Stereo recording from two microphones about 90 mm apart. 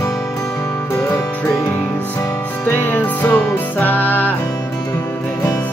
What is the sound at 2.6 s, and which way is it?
Music, 20° left (ahead or behind).